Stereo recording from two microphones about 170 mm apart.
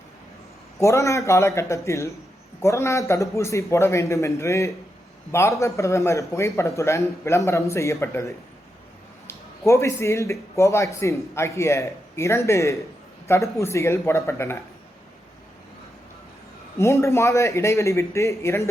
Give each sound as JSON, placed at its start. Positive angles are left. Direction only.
{"t": 0.8, "sound": "speech", "side_deg": 20}
{"t": 16.7, "sound": "speech", "side_deg": 15}